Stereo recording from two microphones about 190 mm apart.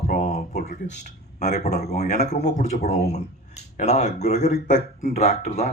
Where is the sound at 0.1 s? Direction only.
35° left (ahead or behind).